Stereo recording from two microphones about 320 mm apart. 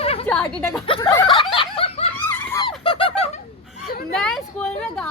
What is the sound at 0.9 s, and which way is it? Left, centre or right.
Snicker, centre.